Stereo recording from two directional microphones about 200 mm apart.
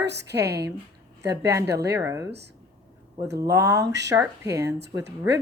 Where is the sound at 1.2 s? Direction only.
15° right (ahead or behind).